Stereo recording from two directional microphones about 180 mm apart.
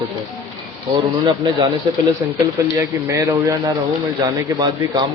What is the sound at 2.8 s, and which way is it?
Speech, 15° right (ahead or behind).